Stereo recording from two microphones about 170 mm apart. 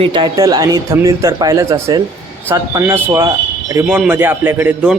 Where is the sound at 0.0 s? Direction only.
25° right (ahead or behind).